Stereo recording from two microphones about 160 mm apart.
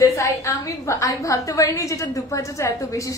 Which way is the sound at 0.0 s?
20° left (ahead or behind).